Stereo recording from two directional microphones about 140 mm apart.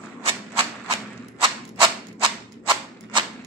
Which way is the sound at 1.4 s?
35° right (ahead or behind).